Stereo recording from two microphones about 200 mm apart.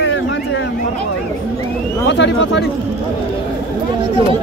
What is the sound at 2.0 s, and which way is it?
Speech, 65° left (ahead or behind).